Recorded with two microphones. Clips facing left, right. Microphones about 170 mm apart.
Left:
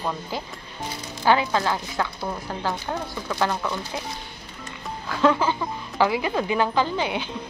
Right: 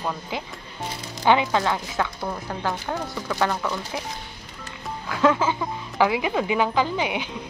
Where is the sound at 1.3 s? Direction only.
20° right (ahead or behind).